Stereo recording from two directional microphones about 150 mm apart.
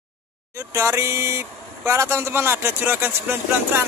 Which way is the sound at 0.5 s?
20° right (ahead or behind).